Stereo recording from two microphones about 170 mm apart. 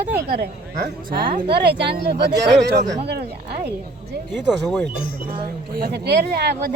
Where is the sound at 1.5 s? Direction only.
75° right (ahead or behind).